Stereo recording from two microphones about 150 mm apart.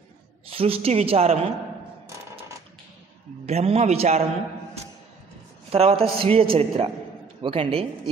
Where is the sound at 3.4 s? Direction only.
45° right (ahead or behind).